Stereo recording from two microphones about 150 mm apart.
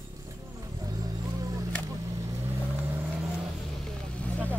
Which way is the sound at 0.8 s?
25° right (ahead or behind).